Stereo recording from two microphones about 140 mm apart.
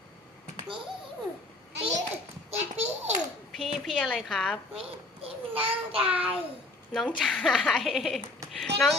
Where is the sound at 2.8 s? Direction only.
55° right (ahead or behind).